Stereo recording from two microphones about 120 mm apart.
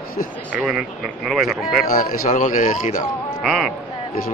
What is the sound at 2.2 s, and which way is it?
Speech, 90° left.